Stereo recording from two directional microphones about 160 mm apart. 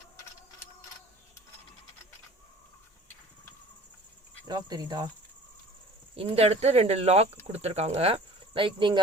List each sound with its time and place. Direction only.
4.4 s speech: 25° right (ahead or behind)
6.1 s speech: 35° right (ahead or behind)